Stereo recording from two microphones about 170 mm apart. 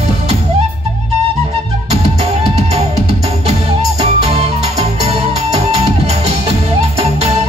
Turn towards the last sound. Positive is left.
turn(degrees=-35)  # may be behind; listen again after turning